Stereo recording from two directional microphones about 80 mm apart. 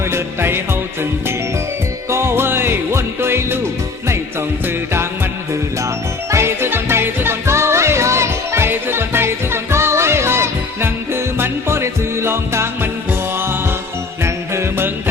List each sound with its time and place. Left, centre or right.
0.1 s music: right
2.0 s music: right
6.3 s music: right
14.3 s music: right